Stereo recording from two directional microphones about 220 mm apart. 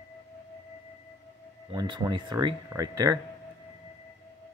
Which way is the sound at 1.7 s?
20° right (ahead or behind).